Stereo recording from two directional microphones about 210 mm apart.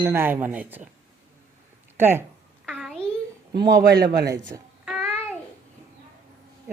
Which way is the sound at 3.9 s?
50° right (ahead or behind).